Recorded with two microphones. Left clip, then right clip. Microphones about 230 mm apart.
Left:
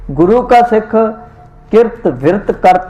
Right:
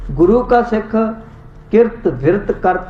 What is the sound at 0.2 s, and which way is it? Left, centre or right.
A man's voice, left.